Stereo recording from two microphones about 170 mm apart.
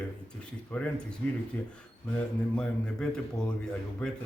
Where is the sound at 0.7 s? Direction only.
5° left (ahead or behind).